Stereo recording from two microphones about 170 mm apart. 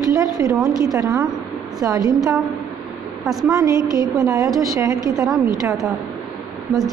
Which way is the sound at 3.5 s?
20° right (ahead or behind).